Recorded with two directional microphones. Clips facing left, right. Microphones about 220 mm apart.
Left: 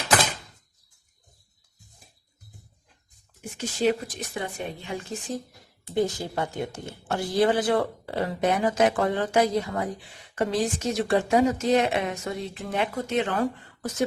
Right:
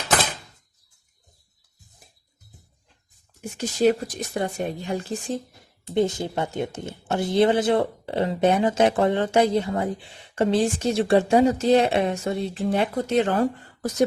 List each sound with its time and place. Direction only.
3.8 s speech: 40° right (ahead or behind)
5.9 s speech: 20° right (ahead or behind)